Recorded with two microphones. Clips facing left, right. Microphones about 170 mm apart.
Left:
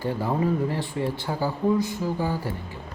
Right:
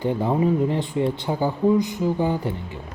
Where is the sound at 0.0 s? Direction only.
20° right (ahead or behind).